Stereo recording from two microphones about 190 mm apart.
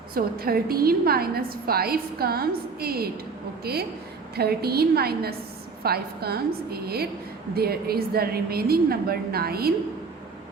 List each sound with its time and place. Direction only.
0.1 s a woman's voice: 50° right (ahead or behind)